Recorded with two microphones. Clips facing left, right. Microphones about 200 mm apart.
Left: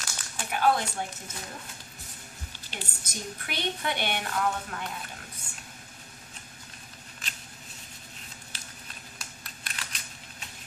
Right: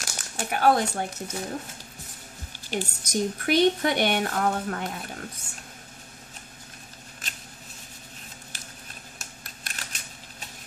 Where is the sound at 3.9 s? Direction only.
45° right (ahead or behind).